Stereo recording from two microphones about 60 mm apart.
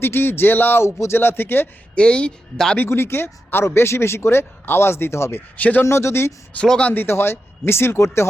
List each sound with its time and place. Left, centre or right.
0.0 s speech: left
2.0 s speech: centre
2.7 s speech: left
5.5 s speech: left
5.8 s speech: left
6.7 s speech: centre
6.9 s speech: left